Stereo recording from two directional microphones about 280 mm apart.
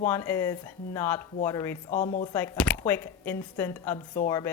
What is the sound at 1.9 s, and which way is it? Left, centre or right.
Speech, left.